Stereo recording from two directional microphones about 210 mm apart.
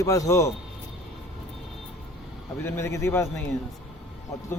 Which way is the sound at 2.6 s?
10° left (ahead or behind).